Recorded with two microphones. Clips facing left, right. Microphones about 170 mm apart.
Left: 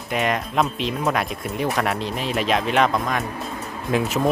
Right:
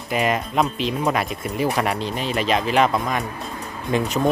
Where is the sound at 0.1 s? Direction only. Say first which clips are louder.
Right 1 dB; centre (ahead or behind).